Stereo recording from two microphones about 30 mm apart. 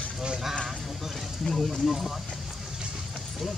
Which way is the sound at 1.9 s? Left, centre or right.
Centre.